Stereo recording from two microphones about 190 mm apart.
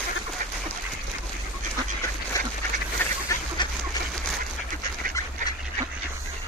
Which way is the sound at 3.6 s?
25° left (ahead or behind).